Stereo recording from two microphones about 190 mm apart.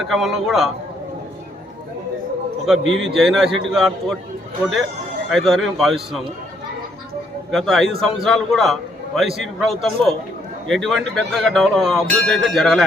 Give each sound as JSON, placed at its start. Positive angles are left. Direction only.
{"t": 0.0, "sound": "a man's voice", "side_deg": 0}
{"t": 2.8, "sound": "a man's voice", "side_deg": -75}
{"t": 3.1, "sound": "a man's voice", "side_deg": 0}
{"t": 5.3, "sound": "a man's voice", "side_deg": 0}
{"t": 7.5, "sound": "a man's voice", "side_deg": 0}